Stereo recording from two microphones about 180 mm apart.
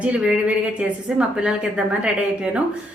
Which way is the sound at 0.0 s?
5° right (ahead or behind).